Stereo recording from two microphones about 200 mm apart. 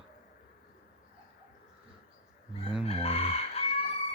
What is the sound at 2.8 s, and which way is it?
Chicken, 30° left (ahead or behind).